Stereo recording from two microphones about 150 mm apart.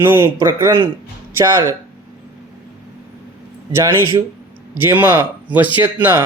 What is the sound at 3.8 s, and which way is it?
Speech, 15° right (ahead or behind).